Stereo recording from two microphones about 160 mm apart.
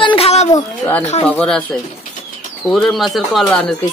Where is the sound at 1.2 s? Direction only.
5° left (ahead or behind).